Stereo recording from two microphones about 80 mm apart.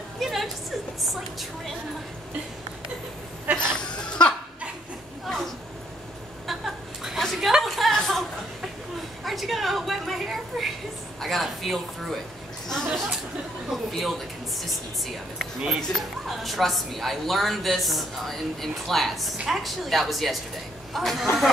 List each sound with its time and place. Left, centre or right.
0.2 s music: centre
1.0 s a woman's voice: centre
3.5 s speech: centre
3.8 s laughter: centre
5.2 s a sound: centre
9.2 s a sound: centre
11.1 s speech: centre
12.6 s a sound: centre
13.9 s a woman's voice: centre